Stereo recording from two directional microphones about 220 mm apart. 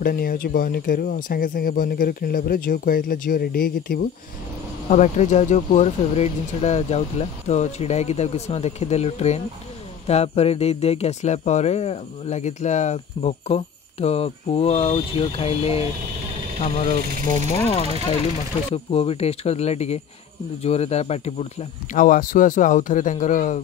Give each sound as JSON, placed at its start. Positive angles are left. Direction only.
{"t": 0.0, "sound": "speech", "side_deg": 45}
{"t": 4.8, "sound": "speech", "side_deg": 30}
{"t": 17.3, "sound": "speech", "side_deg": 25}